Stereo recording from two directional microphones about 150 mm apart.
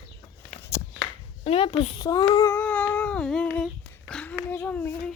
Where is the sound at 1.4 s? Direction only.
40° left (ahead or behind).